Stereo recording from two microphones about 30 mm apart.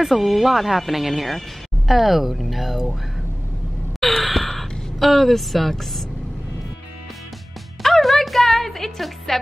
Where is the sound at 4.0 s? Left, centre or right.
Centre.